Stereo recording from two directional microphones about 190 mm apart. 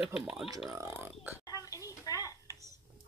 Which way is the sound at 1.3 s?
20° left (ahead or behind).